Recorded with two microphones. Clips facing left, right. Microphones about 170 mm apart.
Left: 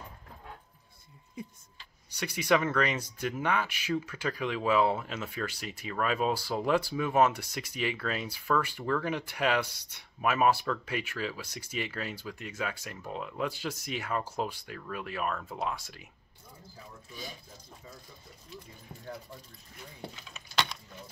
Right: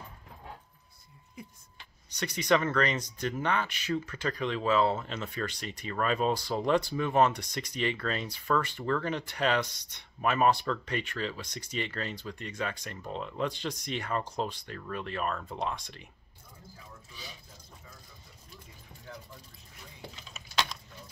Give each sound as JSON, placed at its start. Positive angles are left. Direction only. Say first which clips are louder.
{"t": 2.0, "sound": "speech", "louder": "even", "side_deg": 10}
{"t": 17.1, "sound": "speech", "louder": "left 6 dB", "side_deg": 45}
{"t": 20.2, "sound": "keys jangling", "louder": "even", "side_deg": 0}